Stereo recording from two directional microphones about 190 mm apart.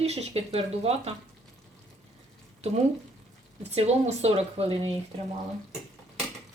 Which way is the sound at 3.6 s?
35° right (ahead or behind).